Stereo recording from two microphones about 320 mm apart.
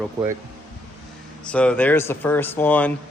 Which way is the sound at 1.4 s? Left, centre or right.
Centre.